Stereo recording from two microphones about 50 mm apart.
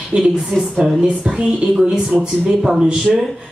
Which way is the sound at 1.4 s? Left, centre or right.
Centre.